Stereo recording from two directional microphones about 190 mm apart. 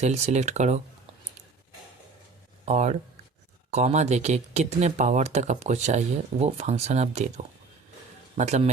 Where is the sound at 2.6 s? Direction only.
35° right (ahead or behind).